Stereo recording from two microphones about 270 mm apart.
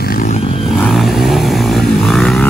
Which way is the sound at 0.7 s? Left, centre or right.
Centre.